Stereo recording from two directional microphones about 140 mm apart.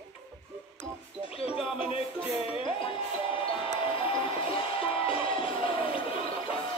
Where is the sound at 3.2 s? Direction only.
40° left (ahead or behind).